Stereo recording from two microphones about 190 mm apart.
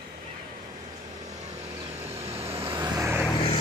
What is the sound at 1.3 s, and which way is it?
Vehicle, 35° right (ahead or behind).